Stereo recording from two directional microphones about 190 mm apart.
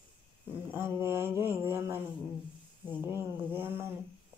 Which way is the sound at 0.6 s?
10° right (ahead or behind).